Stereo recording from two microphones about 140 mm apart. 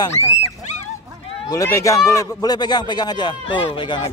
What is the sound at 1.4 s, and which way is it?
A man's voice, 25° left (ahead or behind).